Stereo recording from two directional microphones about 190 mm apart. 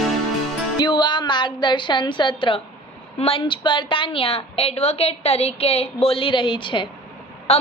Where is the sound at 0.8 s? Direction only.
25° left (ahead or behind).